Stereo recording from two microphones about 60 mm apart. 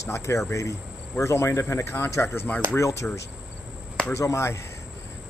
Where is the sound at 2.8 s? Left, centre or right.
Left.